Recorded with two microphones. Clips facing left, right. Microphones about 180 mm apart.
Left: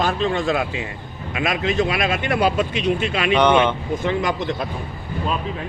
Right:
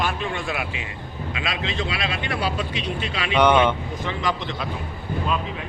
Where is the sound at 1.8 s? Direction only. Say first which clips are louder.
Left 7 dB; 45° left (ahead or behind).